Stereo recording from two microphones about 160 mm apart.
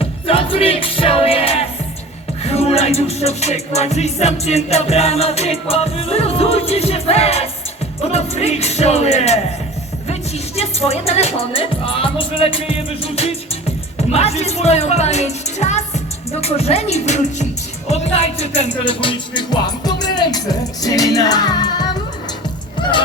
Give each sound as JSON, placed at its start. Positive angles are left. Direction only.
{"t": 0.0, "sound": "music", "side_deg": 35}
{"t": 8.0, "sound": "speech", "side_deg": 40}
{"t": 10.1, "sound": "music", "side_deg": 40}
{"t": 14.1, "sound": "speech", "side_deg": 40}
{"t": 16.3, "sound": "music", "side_deg": 40}